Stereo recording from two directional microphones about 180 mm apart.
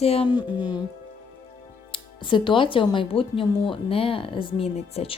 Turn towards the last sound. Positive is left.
turn(degrees=35)  # may be behind; listen again after turning